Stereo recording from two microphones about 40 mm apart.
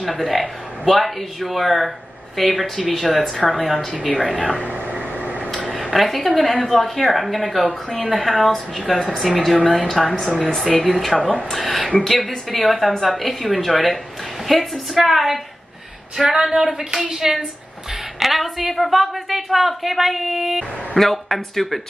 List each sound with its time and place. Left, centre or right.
0.0 s a woman's voice: centre
4.1 s speech: left
4.6 s a sound: right
5.9 s a woman's voice: centre
16.2 s a sound: centre
18.2 s a woman's voice: centre